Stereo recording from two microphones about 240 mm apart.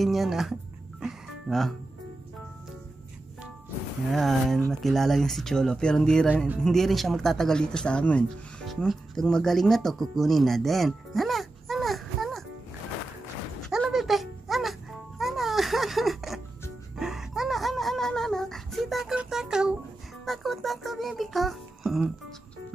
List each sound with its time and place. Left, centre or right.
0.0 s speech: centre
1.0 s music: centre
4.1 s speech: centre
13.7 s music: centre
16.9 s a sound: centre
20.2 s music: centre